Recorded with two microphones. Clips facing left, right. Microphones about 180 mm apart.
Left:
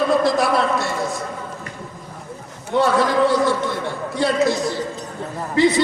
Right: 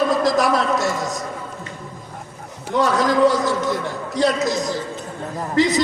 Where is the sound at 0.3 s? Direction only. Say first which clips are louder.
Even; 40° right (ahead or behind).